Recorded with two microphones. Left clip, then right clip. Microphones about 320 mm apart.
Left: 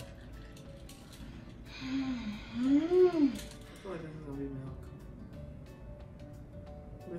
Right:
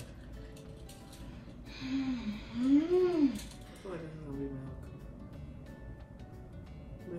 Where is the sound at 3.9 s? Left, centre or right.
Centre.